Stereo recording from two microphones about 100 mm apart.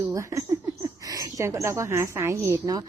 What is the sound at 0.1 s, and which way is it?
A woman's voice, 30° right (ahead or behind).